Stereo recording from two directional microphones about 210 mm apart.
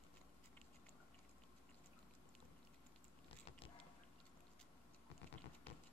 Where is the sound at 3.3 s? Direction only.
25° left (ahead or behind).